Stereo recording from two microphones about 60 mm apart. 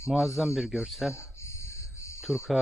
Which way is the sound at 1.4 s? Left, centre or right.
Left.